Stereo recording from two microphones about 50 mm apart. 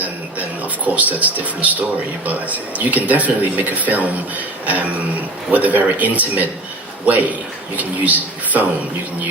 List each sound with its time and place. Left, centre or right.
0.9 s speech: right